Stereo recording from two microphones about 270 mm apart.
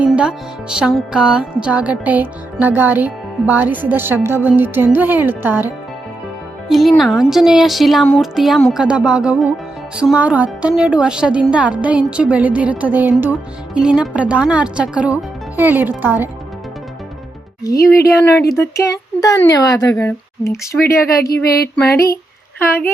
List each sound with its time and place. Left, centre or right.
0.0 s music: centre
6.7 s a woman's voice: centre
15.5 s music: centre
17.6 s a woman's voice: centre
21.2 s a sound: left